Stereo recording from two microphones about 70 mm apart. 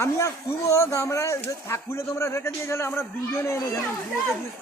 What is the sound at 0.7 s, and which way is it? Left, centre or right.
Speech, left.